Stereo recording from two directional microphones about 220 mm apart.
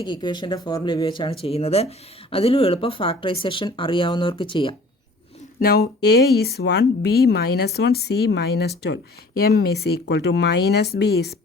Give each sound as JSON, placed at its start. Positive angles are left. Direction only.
{"t": 0.0, "sound": "speech", "side_deg": 20}
{"t": 5.5, "sound": "speech", "side_deg": 45}